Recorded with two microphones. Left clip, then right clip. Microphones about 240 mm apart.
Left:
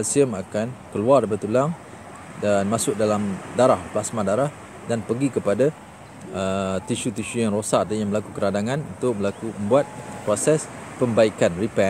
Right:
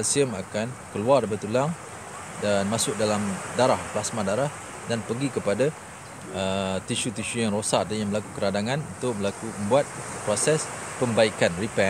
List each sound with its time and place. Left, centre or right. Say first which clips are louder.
0.0 s speech: left 4 dB; centre